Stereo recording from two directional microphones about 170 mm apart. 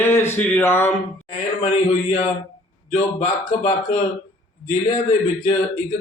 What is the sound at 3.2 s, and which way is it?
Speech, 50° left (ahead or behind).